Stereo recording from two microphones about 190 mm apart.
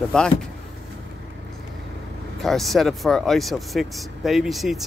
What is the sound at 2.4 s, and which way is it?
Speech, centre (ahead or behind).